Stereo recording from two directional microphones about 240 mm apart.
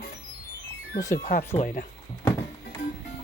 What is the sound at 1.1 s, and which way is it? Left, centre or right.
Speech, left.